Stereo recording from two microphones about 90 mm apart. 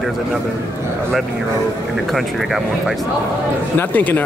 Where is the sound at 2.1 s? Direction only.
Centre (ahead or behind).